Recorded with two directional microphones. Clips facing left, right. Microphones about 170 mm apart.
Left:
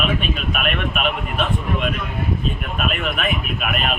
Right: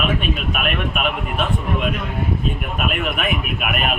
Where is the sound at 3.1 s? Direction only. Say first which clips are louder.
Right 1 dB; 10° right (ahead or behind).